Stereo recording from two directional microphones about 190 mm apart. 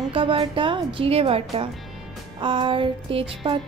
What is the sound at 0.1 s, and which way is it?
Speech, 30° right (ahead or behind).